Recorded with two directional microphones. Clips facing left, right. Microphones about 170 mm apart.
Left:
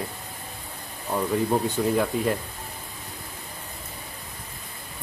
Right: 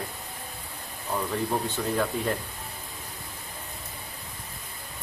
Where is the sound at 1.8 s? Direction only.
10° left (ahead or behind).